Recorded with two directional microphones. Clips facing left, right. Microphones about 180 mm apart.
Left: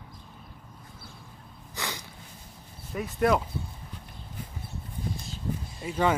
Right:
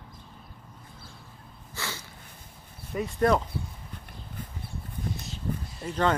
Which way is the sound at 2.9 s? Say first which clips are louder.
Right 1 dB; centre (ahead or behind).